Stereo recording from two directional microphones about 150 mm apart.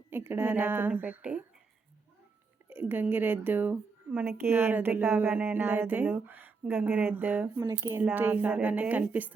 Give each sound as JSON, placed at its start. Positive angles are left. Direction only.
{"t": 0.1, "sound": "a woman's voice", "side_deg": -15}
{"t": 2.6, "sound": "a woman's voice", "side_deg": -15}